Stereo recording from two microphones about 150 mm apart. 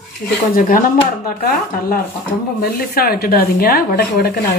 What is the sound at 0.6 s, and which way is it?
Speech, 65° left (ahead or behind).